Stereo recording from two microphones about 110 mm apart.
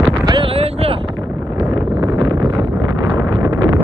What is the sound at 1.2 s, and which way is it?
Wind noise, 20° right (ahead or behind).